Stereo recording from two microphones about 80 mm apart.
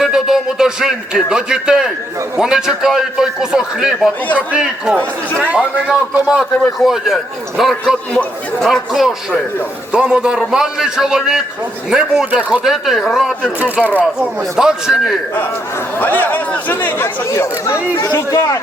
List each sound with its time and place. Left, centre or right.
0.0 s a man's voice: centre
6.6 s speech: centre
8.1 s a man's voice: centre
8.7 s a man's voice: centre
12.6 s speech: centre
14.5 s speech: centre
16.0 s speech: left
17.2 s speech: left